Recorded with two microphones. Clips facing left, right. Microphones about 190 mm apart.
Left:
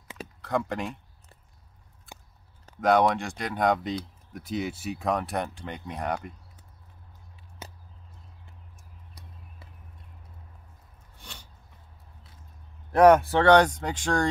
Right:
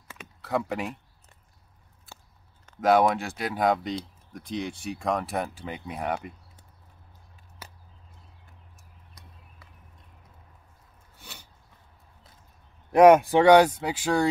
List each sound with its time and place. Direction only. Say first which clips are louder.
0.4 s speech: even; 5° right (ahead or behind)
2.1 s biting: left 2 dB; 15° left (ahead or behind)
2.8 s speech: right 1 dB; 5° right (ahead or behind)
7.6 s a sound: left 4 dB; 25° left (ahead or behind)
11.1 s a sound: even; 5° right (ahead or behind)
12.9 s speech: right 2 dB; 15° right (ahead or behind)